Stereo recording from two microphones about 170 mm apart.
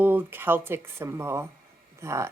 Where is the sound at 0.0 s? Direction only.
10° right (ahead or behind).